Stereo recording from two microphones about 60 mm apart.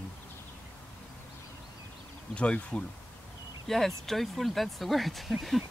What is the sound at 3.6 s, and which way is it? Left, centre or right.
Speech, centre.